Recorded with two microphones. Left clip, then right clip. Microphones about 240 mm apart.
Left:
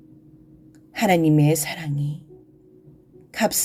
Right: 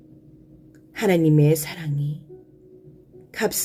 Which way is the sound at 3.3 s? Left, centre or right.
Left.